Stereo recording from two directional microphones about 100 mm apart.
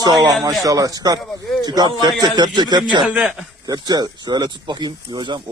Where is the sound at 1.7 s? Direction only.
45° right (ahead or behind).